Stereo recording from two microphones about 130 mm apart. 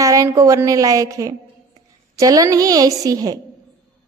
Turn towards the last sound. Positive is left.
turn(degrees=-30)  # may be behind; listen again after turning